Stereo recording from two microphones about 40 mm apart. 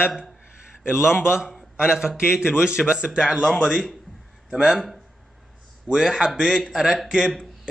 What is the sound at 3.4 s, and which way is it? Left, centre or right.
A man's voice, centre.